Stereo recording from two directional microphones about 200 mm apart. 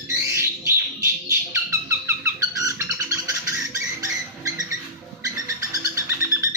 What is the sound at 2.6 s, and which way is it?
Bird, 15° right (ahead or behind).